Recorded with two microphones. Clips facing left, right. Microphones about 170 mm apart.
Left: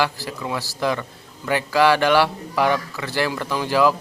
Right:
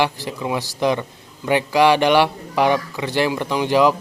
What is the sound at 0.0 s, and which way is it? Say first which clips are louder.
Speech: right 2 dB; 20° right (ahead or behind).